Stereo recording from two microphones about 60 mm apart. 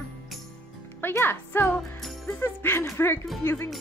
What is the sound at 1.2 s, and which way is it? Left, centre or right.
Speech, left.